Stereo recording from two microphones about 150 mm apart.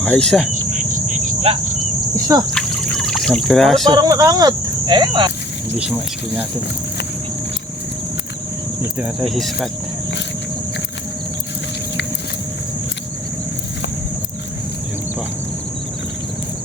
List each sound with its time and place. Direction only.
0.0 s speech: 5° left (ahead or behind)
0.5 s cricket: 55° right (ahead or behind)
2.5 s trickle: 5° left (ahead or behind)
3.8 s speech: 25° right (ahead or behind)
5.7 s speech: 10° right (ahead or behind)
9.2 s speech: centre (ahead or behind)